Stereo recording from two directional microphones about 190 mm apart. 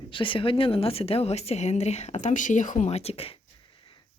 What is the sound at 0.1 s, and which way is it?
A woman's voice, 25° left (ahead or behind).